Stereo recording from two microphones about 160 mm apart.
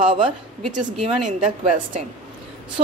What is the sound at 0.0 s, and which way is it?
Speech, 30° right (ahead or behind).